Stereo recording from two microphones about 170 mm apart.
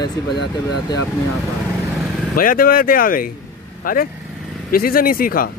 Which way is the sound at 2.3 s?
55° left (ahead or behind).